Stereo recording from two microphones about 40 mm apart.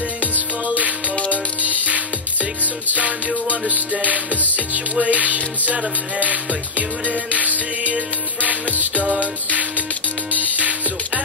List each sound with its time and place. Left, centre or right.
0.7 s music: right
1.1 s music: left
1.6 s music: right